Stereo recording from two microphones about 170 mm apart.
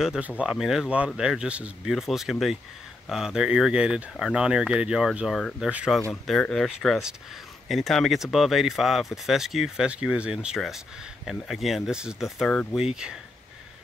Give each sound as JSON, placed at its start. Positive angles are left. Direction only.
{"t": 0.0, "sound": "speech", "side_deg": -5}